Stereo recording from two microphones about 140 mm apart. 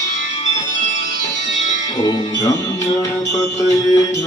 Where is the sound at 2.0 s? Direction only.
30° left (ahead or behind).